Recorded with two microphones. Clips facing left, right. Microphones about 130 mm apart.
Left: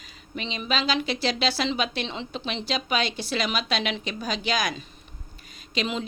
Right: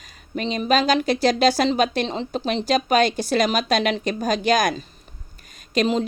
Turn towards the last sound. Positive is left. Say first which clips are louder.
# right 8 dB
turn(degrees=-40)  # may be behind; listen again after turning